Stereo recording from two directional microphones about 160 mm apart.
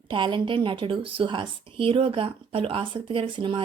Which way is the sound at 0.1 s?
30° right (ahead or behind).